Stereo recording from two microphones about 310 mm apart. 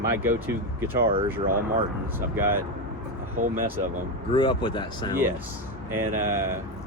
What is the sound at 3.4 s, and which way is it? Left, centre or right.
Speech, right.